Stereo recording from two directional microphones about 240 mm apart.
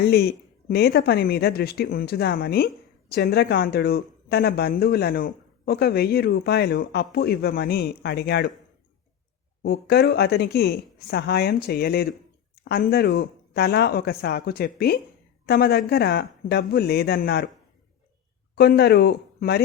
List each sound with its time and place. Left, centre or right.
0.0 s speech: left
9.6 s speech: left
18.5 s speech: left